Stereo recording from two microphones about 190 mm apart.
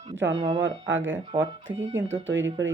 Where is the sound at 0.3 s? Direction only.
30° right (ahead or behind).